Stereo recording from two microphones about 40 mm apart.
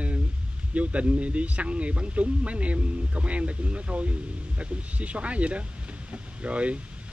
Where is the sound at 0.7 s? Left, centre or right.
Right.